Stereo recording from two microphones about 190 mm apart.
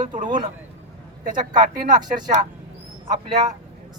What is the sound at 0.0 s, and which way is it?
Speech, 40° right (ahead or behind).